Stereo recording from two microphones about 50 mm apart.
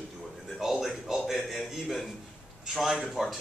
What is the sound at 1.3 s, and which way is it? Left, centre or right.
Speech, centre.